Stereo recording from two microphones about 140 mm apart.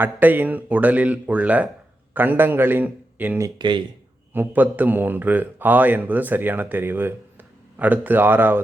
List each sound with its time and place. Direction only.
0.0 s a man's voice: 15° right (ahead or behind)
3.6 s speech: 35° right (ahead or behind)
4.4 s a man's voice: 15° right (ahead or behind)